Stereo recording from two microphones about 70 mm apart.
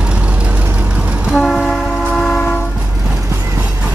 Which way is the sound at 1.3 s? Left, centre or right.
Centre.